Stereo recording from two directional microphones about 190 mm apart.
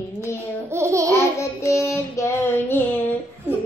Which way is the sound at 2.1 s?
10° left (ahead or behind).